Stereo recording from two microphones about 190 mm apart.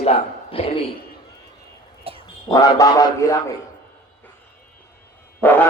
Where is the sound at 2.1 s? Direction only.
30° right (ahead or behind).